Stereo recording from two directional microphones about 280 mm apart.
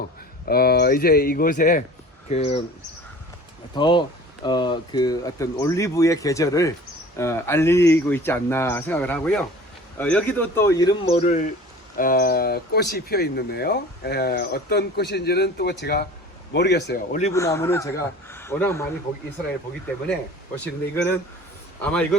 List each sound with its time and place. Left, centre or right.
0.4 s speech: left
3.8 s speech: centre
17.3 s speech: centre
20.9 s a man's voice: centre